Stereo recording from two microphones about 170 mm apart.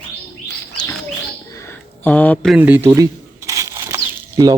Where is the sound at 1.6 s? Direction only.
10° left (ahead or behind).